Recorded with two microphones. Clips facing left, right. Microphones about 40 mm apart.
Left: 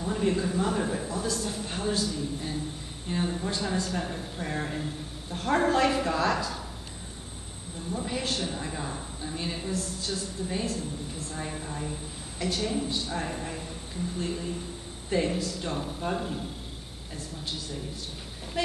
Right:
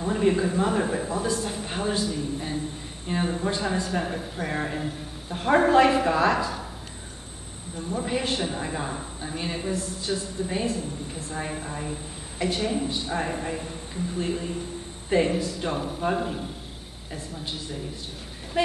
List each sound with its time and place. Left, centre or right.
0.0 s a woman's voice: centre
7.9 s a woman's voice: right